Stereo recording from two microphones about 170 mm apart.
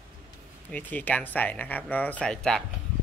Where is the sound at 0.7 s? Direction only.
10° left (ahead or behind).